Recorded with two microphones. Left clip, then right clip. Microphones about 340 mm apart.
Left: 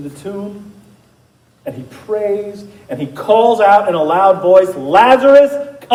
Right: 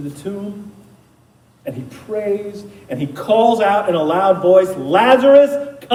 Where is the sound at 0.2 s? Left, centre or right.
Left.